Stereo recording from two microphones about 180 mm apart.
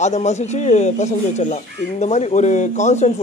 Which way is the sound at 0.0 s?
40° left (ahead or behind).